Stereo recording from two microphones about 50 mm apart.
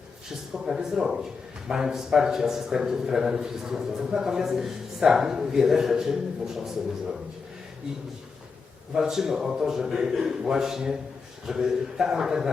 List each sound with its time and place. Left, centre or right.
0.5 s a man's voice: centre
9.0 s a man's voice: centre